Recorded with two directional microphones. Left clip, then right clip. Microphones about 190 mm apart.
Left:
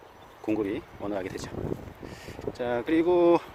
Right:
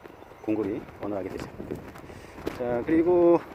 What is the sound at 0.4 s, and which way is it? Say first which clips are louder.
Speech: even; 20° left (ahead or behind).